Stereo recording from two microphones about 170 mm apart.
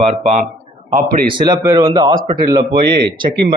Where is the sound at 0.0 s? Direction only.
45° right (ahead or behind).